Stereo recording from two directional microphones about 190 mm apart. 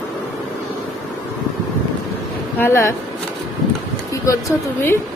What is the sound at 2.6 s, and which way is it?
Speech, 15° left (ahead or behind).